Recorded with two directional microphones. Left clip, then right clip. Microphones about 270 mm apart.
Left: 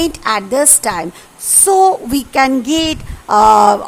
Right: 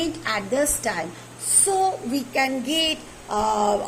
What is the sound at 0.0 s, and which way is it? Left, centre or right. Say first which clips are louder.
A woman's voice: left 10 dB; left.